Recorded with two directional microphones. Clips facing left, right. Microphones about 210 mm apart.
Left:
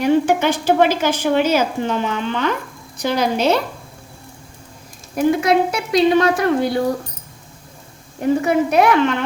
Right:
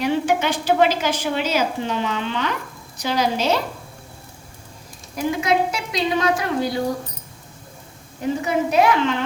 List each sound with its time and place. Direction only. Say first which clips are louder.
0.0 s a woman's voice: left 5 dB; 50° left (ahead or behind)
5.1 s a woman's voice: left 5 dB; 55° left (ahead or behind)
8.2 s a woman's voice: left 5 dB; 60° left (ahead or behind)